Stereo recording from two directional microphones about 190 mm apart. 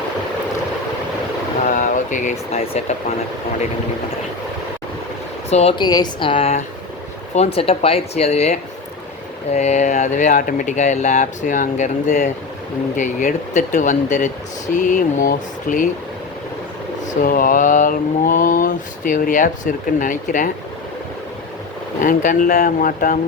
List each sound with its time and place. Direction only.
1.6 s a sound: 40° left (ahead or behind)
5.5 s speech: 35° left (ahead or behind)
14.8 s mantra: 45° left (ahead or behind)
17.2 s mantra: 45° left (ahead or behind)
22.0 s mantra: 45° left (ahead or behind)